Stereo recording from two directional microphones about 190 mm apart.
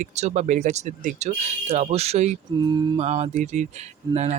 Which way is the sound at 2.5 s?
20° right (ahead or behind).